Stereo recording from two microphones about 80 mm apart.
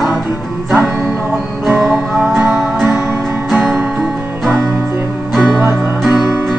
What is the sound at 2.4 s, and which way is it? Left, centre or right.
Music, right.